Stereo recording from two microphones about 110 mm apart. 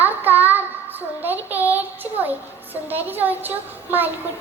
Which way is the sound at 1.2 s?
15° right (ahead or behind).